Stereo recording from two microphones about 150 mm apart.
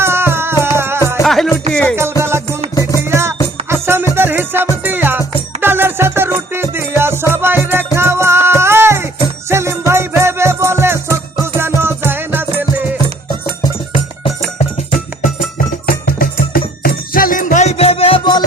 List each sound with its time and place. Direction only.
0.0 s music: 15° right (ahead or behind)
1.2 s music: centre (ahead or behind)
2.2 s music: 15° right (ahead or behind)
16.0 s music: 80° left; by 18.4 s 35° left (ahead or behind)